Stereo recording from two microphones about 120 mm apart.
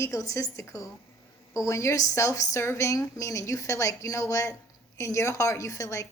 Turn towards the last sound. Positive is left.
turn(degrees=25)  # may be behind; listen again after turning